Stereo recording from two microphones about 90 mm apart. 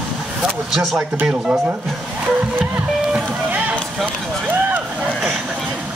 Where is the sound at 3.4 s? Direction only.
15° right (ahead or behind).